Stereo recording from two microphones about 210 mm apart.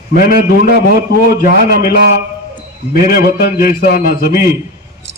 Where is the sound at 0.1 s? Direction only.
45° left (ahead or behind).